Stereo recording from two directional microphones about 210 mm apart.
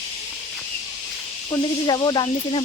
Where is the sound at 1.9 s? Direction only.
20° left (ahead or behind).